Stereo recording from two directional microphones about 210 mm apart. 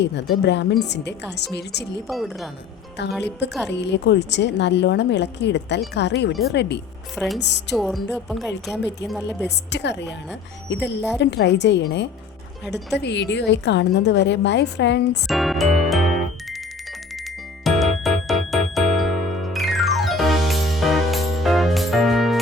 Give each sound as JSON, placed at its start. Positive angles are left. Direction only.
{"t": 0.0, "sound": "a woman's voice", "side_deg": 55}
{"t": 2.0, "sound": "speech", "side_deg": 0}
{"t": 3.7, "sound": "a woman's voice", "side_deg": 55}
{"t": 7.8, "sound": "speech", "side_deg": 0}
{"t": 9.7, "sound": "a woman's voice", "side_deg": 55}
{"t": 15.3, "sound": "music", "side_deg": 0}
{"t": 17.6, "sound": "music", "side_deg": 0}